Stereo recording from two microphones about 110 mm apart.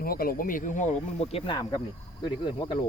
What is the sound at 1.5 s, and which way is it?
A man's voice, 40° left (ahead or behind).